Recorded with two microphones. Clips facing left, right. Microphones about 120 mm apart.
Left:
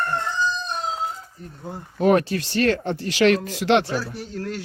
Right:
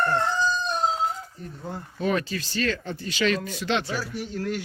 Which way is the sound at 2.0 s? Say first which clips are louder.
Left 8 dB; 65° left (ahead or behind).